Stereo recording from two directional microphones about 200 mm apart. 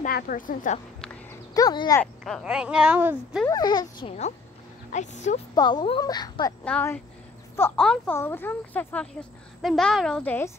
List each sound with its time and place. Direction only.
0.0 s a woman's voice: 45° left (ahead or behind)
1.5 s speech: 20° left (ahead or behind)
2.0 s a woman's voice: 5° left (ahead or behind)
3.4 s a woman's voice: 20° left (ahead or behind)
5.5 s a woman's voice: 20° left (ahead or behind)
6.6 s a woman's voice: 10° left (ahead or behind)